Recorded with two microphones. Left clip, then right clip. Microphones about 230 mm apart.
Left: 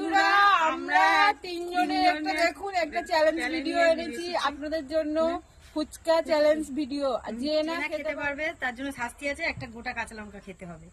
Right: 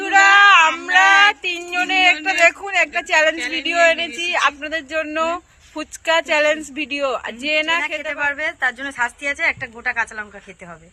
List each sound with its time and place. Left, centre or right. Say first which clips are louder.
0.0 s a sound: right 10 dB; right
3.5 s speech: right 8 dB; right
8.2 s speech: right 10 dB; centre